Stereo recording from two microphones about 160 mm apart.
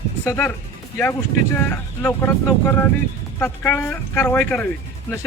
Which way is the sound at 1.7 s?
10° left (ahead or behind).